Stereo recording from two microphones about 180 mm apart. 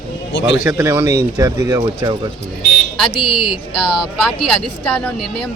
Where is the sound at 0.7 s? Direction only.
15° right (ahead or behind).